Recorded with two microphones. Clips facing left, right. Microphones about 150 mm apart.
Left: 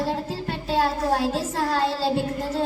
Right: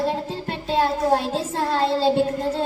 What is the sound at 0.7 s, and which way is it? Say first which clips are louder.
Child singing: right 3 dB; 25° right (ahead or behind).